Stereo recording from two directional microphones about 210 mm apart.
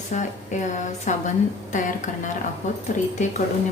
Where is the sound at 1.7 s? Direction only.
35° left (ahead or behind).